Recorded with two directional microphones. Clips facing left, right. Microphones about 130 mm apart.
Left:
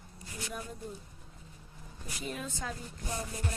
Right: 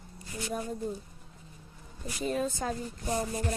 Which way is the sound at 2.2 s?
35° right (ahead or behind).